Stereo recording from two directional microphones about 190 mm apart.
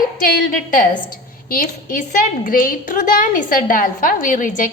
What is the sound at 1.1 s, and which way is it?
A woman's voice, 50° left (ahead or behind).